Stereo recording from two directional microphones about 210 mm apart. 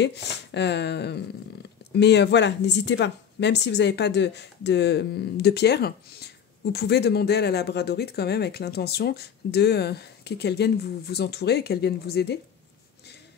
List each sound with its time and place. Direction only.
0.0 s speech: 55° left (ahead or behind)